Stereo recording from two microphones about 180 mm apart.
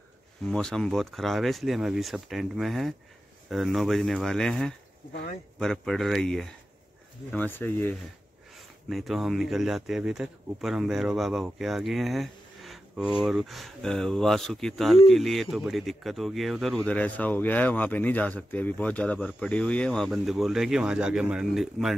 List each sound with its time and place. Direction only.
0.5 s speech: 5° left (ahead or behind)
5.1 s speech: 55° left (ahead or behind)
5.6 s speech: centre (ahead or behind)
8.5 s speech: centre (ahead or behind)